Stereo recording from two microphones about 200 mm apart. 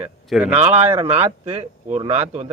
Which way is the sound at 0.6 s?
30° right (ahead or behind).